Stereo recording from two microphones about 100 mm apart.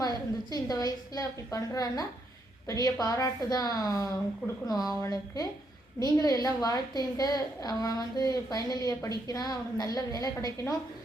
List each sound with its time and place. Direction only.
0.0 s a woman's voice: 40° left (ahead or behind)